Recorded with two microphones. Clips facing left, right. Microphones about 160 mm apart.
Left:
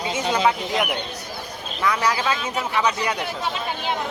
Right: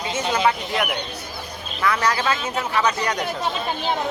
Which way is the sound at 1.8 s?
10° left (ahead or behind).